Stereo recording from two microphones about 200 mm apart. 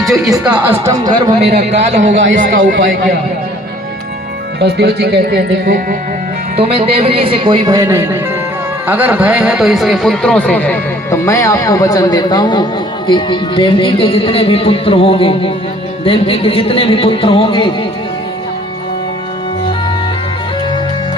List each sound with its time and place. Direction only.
0.0 s speech: centre (ahead or behind)
0.6 s speech: 15° right (ahead or behind)
1.5 s a man's voice: 55° right (ahead or behind)
2.5 s speech: 45° right (ahead or behind)
4.6 s speech: 55° right (ahead or behind)
6.6 s a man's voice: 30° right (ahead or behind); by 17.7 s 25° left (ahead or behind)